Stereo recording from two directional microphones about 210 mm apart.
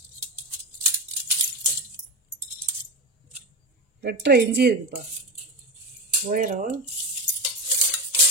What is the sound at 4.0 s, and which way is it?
Speech, 50° right (ahead or behind).